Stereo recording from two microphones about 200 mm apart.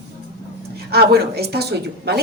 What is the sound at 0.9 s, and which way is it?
Speech, 50° right (ahead or behind).